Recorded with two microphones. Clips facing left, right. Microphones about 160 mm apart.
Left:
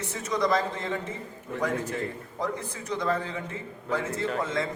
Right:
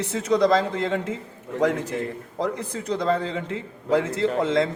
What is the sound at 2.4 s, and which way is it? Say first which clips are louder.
A man's voice: right 5 dB; 70° right (ahead or behind).